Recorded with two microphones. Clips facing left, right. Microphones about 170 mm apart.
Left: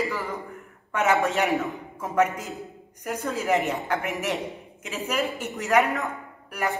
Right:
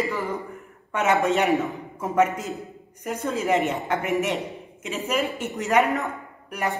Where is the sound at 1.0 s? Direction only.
Centre (ahead or behind).